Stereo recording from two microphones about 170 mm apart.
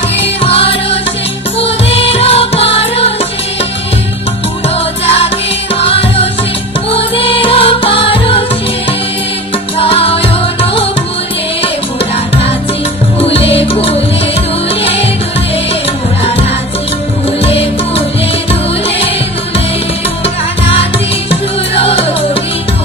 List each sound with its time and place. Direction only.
0.4 s music: 35° left (ahead or behind)
5.0 s music: 35° left (ahead or behind)
9.8 s music: 35° left (ahead or behind)
13.2 s music: 35° left (ahead or behind)
17.4 s music: 35° left (ahead or behind)
21.3 s music: 35° left (ahead or behind)